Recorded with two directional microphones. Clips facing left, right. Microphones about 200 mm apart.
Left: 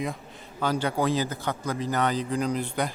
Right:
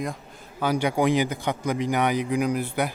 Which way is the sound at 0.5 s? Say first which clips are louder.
Right 3 dB; 10° right (ahead or behind).